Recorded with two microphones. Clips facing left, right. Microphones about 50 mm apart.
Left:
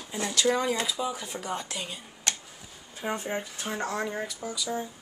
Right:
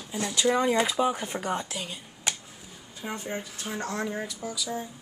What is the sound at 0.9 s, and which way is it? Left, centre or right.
Speech, right.